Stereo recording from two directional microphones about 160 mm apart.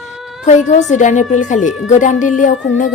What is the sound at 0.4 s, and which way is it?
A woman's voice, 50° left (ahead or behind).